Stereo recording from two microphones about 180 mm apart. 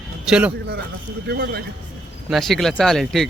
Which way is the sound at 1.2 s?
65° right (ahead or behind).